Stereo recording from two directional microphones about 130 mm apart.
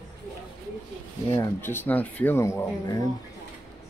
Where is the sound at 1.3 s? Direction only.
20° left (ahead or behind).